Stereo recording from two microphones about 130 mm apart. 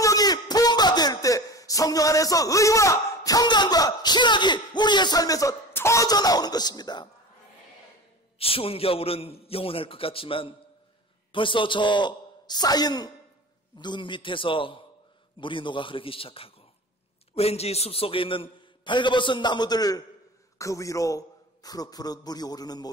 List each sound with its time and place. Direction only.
0.0 s a man's voice: 30° left (ahead or behind)
8.4 s a man's voice: 45° left (ahead or behind); by 22.8 s 30° left (ahead or behind)